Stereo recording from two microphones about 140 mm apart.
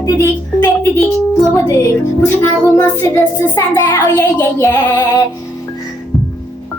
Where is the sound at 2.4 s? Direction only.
20° left (ahead or behind).